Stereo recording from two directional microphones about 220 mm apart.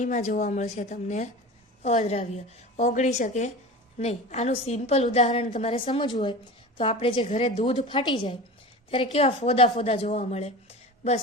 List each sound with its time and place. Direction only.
0.0 s a woman's voice: 30° left (ahead or behind)